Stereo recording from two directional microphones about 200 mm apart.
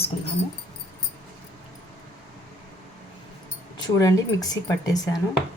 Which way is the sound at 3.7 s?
20° left (ahead or behind).